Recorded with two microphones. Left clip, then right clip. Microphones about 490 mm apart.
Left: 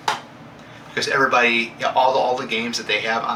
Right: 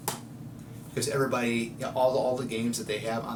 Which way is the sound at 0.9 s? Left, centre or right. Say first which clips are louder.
Left 11 dB; right.